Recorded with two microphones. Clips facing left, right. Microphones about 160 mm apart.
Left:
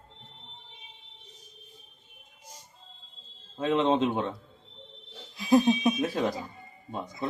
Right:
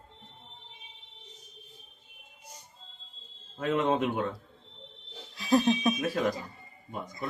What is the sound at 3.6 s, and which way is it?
Speech, 25° left (ahead or behind).